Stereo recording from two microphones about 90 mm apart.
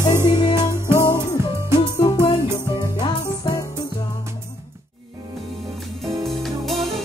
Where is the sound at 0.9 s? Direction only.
40° left (ahead or behind).